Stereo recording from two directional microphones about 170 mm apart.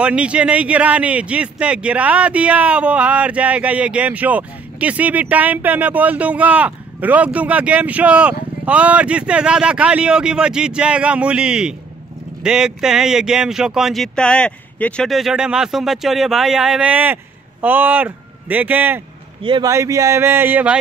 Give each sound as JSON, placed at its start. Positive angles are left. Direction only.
{"t": 0.0, "sound": "a man's voice", "side_deg": -5}
{"t": 19.4, "sound": "speech", "side_deg": -30}
{"t": 19.7, "sound": "a man's voice", "side_deg": -15}